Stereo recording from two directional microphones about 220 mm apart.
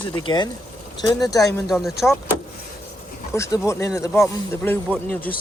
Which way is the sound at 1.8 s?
Centre (ahead or behind).